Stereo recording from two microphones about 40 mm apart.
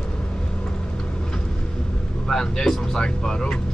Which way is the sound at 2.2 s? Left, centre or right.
Centre.